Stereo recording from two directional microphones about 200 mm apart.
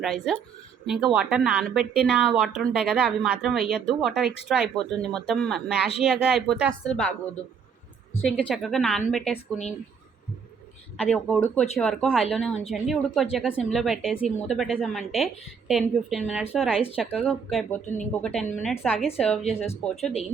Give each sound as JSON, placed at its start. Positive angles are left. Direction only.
{"t": 0.0, "sound": "a woman's voice", "side_deg": 0}
{"t": 8.2, "sound": "a woman's voice", "side_deg": 0}
{"t": 10.9, "sound": "a woman's voice", "side_deg": 5}
{"t": 17.8, "sound": "speech", "side_deg": 40}
{"t": 18.6, "sound": "a woman's voice", "side_deg": -5}